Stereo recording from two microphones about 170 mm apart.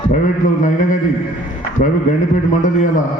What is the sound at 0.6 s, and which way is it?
Speech, 50° left (ahead or behind).